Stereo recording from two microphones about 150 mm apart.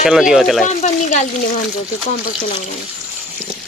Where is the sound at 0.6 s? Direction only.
50° left (ahead or behind).